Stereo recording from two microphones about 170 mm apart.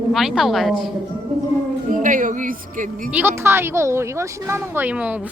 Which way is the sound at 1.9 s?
50° right (ahead or behind).